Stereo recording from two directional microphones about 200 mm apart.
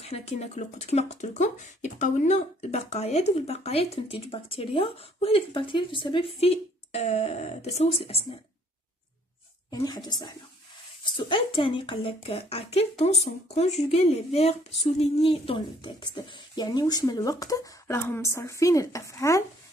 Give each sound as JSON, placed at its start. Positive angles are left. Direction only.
{"t": 0.0, "sound": "speech", "side_deg": 30}
{"t": 9.7, "sound": "speech", "side_deg": 20}